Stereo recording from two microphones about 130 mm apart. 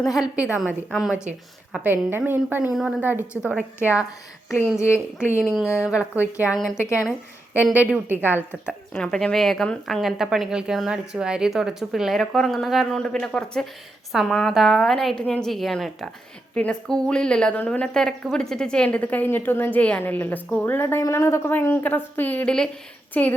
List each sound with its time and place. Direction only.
0.2 s a woman's voice: 10° right (ahead or behind)
4.8 s speech: 20° left (ahead or behind)
5.9 s a woman's voice: 10° right (ahead or behind)
6.7 s speech: 20° left (ahead or behind)
7.6 s a woman's voice: 10° right (ahead or behind)
9.0 s a woman's voice: 5° left (ahead or behind)